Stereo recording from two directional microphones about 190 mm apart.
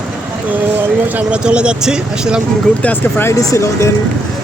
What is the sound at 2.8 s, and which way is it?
Speech, 10° left (ahead or behind).